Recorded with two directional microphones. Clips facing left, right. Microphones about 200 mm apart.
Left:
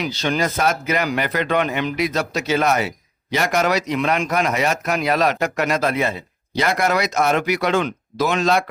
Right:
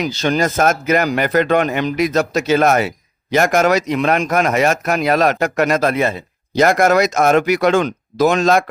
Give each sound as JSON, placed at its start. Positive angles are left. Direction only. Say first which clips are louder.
{"t": 0.0, "sound": "speech", "louder": "right 4 dB", "side_deg": -45}